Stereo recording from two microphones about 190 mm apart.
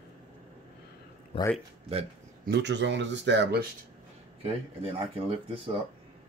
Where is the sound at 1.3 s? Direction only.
30° left (ahead or behind).